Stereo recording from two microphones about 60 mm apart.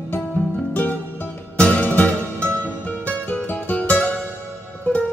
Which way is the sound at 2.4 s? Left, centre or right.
Right.